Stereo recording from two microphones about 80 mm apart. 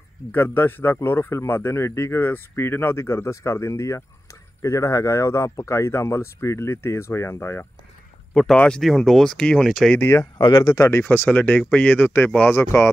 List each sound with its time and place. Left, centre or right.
0.3 s speech: left
8.5 s speech: centre
8.8 s speech: centre
9.9 s speech: left
10.4 s speech: left
10.7 s speech: left
11.1 s speech: centre